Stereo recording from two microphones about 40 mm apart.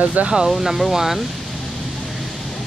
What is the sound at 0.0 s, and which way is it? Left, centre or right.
Speech, right.